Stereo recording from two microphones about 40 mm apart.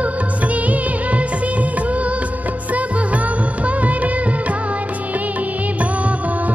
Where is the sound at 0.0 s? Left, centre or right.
Right.